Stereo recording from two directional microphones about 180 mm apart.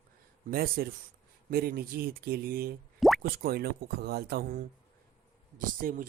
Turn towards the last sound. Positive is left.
turn(degrees=-50)  # may be behind; listen again after turning